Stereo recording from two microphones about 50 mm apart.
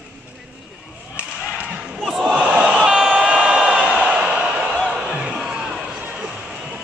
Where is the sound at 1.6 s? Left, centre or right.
Centre.